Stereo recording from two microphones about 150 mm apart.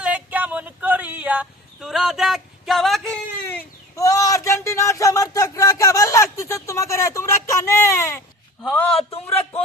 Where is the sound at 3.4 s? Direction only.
20° left (ahead or behind).